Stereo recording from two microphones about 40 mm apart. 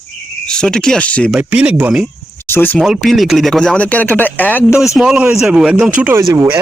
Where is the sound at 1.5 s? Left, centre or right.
Right.